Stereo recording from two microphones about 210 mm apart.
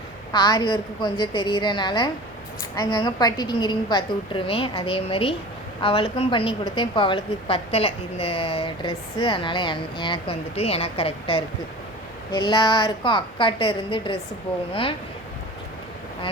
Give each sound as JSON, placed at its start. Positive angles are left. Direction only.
{"t": 0.3, "sound": "a woman's voice", "side_deg": 20}